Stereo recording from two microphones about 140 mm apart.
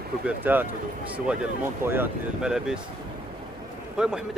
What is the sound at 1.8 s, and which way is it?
Speech, 15° right (ahead or behind).